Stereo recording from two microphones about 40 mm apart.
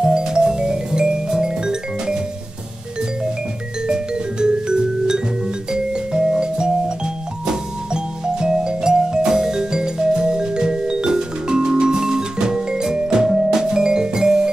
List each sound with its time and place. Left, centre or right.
0.0 s music: centre
3.8 s music: right